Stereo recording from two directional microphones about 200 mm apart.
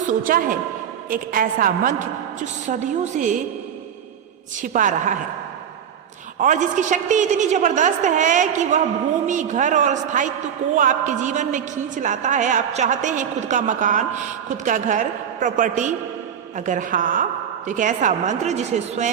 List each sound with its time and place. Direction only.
0.0 s a woman's voice: 40° right (ahead or behind)
4.5 s a man's voice: 40° right (ahead or behind)
6.4 s a man's voice: 40° right (ahead or behind)